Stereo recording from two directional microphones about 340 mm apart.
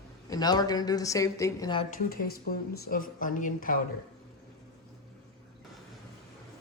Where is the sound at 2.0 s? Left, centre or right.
Left.